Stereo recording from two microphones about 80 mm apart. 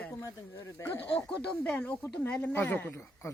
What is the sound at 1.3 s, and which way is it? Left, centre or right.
A man's voice, centre.